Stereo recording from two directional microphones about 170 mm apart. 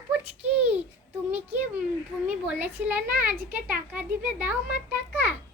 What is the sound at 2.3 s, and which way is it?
A child's voice, 10° right (ahead or behind).